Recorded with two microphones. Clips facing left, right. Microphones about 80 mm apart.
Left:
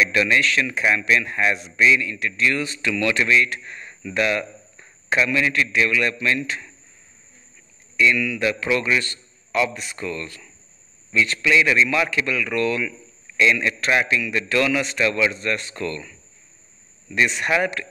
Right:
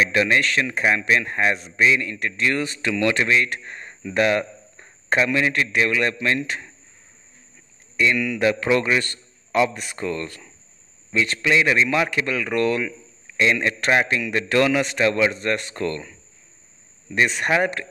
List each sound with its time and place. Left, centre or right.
0.0 s speech: right
2.9 s speech: right
8.0 s speech: right
9.0 s a sound: right
9.8 s speech: right
17.4 s speech: right